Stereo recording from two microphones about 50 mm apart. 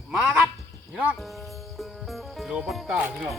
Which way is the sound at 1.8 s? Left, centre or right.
Centre.